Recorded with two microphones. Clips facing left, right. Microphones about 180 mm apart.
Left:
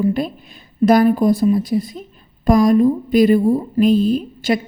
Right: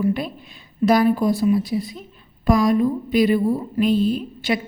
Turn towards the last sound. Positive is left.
turn(degrees=40)  # may be behind; listen again after turning